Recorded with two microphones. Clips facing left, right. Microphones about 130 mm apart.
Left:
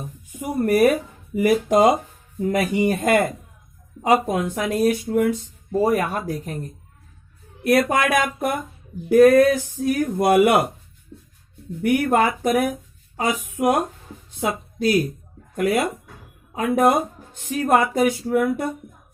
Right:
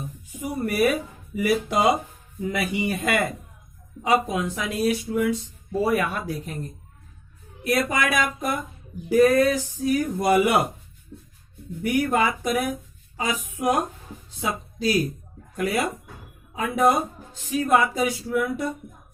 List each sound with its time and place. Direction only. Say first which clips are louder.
0.3 s speech: left 7 dB; 55° left (ahead or behind)
7.6 s speech: left 5 dB; 55° left (ahead or behind)
11.8 s speech: left 4 dB; 60° left (ahead or behind)